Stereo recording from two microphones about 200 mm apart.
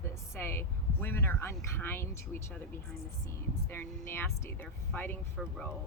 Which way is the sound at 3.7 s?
10° left (ahead or behind).